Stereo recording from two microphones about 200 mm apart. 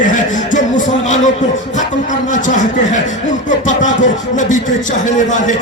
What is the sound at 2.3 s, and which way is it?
Speech, 40° left (ahead or behind).